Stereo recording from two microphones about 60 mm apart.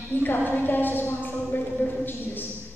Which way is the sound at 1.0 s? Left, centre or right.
Left.